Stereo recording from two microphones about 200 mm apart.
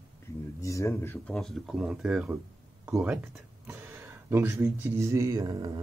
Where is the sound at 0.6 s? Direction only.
15° left (ahead or behind).